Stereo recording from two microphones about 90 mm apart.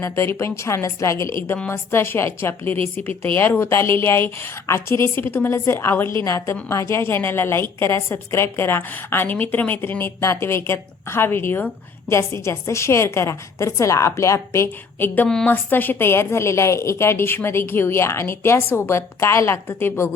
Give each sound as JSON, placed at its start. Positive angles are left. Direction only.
{"t": 0.0, "sound": "a woman's voice", "side_deg": 30}
{"t": 2.7, "sound": "speech", "side_deg": -90}
{"t": 3.3, "sound": "a woman's voice", "side_deg": 25}